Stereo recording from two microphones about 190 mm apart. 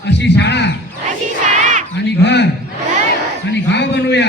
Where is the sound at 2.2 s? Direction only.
65° left (ahead or behind).